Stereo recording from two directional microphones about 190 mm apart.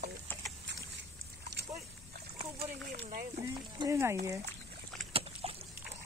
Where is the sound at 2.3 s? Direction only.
30° right (ahead or behind).